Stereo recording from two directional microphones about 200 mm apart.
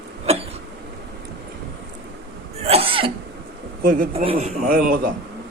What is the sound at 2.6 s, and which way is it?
Throat clearing, 30° right (ahead or behind).